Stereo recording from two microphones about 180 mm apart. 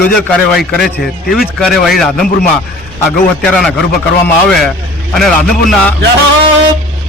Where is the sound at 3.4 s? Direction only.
5° left (ahead or behind).